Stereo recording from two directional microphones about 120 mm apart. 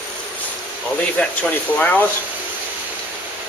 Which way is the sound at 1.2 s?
10° left (ahead or behind).